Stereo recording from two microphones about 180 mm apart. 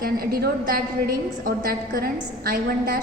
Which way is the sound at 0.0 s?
55° right (ahead or behind).